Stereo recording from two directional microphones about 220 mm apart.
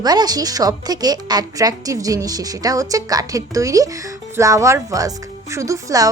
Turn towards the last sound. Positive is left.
turn(degrees=-15)  # may be behind; listen again after turning